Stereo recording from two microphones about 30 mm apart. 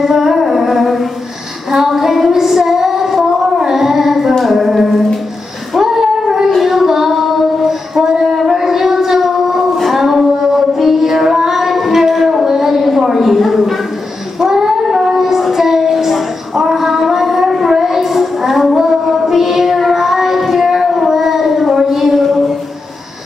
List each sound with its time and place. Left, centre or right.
0.0 s music: centre
1.7 s child singing: centre
4.4 s a sound: centre
5.8 s child singing: centre
7.6 s a sound: centre
8.5 s howl: centre
9.8 s music: centre
10.8 s child singing: centre
12.4 s a sound: centre
14.4 s child singing: centre